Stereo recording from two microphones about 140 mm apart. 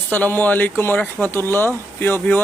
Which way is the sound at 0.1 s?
15° left (ahead or behind).